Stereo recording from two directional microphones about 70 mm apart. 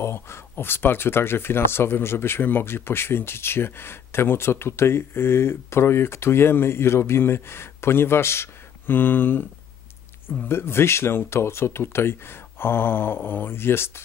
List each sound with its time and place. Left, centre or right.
0.0 s speech: left
10.5 s speech: left